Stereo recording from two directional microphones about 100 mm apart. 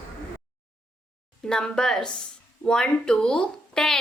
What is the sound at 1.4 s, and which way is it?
A child's voice, 5° left (ahead or behind).